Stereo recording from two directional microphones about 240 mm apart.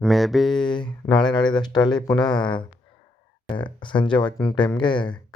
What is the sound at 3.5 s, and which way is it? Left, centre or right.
Speech, centre.